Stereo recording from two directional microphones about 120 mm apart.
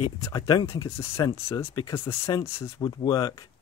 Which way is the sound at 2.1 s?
25° left (ahead or behind).